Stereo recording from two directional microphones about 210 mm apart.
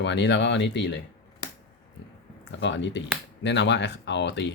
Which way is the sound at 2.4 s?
60° left (ahead or behind).